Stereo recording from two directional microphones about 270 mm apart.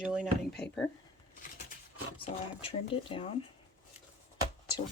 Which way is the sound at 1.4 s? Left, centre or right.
Left.